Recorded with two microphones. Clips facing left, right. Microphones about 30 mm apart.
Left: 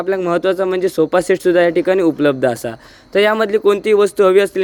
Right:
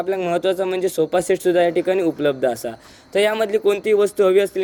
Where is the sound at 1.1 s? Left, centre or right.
Left.